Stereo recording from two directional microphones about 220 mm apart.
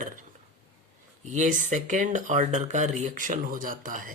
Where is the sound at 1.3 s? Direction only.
35° right (ahead or behind).